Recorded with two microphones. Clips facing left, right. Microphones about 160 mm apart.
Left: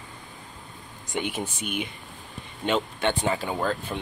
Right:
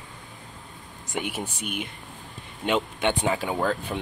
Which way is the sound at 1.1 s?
10° right (ahead or behind).